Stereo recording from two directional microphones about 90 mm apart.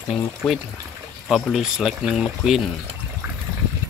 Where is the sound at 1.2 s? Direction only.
Centre (ahead or behind).